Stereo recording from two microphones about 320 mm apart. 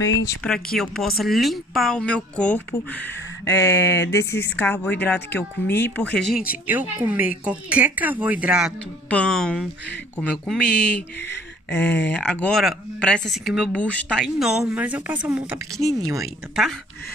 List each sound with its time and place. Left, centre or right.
0.0 s speech: left
0.7 s a woman's voice: centre
6.3 s speech: centre
12.1 s speech: centre